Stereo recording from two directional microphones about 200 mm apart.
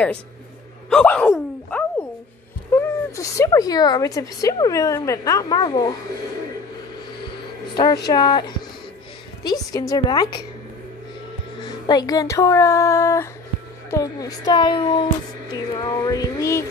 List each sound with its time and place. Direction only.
0.8 s a sound: 5° left (ahead or behind)
2.7 s speech: 15° left (ahead or behind)
7.7 s a woman's voice: 20° left (ahead or behind)
11.6 s a woman's voice: 20° left (ahead or behind)